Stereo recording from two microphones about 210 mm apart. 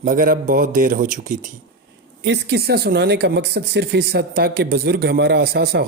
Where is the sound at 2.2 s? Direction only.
55° right (ahead or behind).